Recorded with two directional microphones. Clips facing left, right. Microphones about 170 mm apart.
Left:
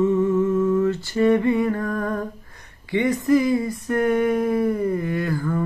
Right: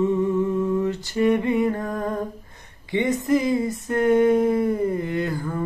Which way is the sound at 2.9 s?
20° right (ahead or behind).